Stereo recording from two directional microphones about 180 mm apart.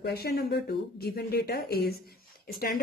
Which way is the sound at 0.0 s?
60° left (ahead or behind).